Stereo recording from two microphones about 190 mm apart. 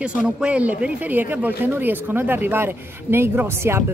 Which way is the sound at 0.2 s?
5° right (ahead or behind).